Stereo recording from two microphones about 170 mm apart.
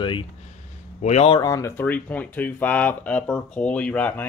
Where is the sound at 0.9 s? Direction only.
40° left (ahead or behind).